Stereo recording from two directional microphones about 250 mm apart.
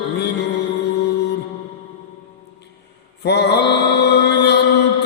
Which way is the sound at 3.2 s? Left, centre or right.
Left.